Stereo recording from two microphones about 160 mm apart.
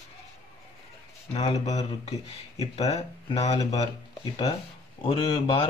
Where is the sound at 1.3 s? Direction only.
40° left (ahead or behind).